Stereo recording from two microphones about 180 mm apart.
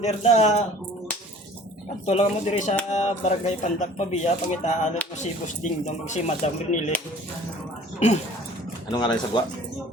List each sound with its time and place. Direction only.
0.0 s speech: 40° left (ahead or behind)
2.0 s speech: 40° left (ahead or behind)
7.9 s speech: 40° left (ahead or behind)
8.9 s speech: 25° left (ahead or behind)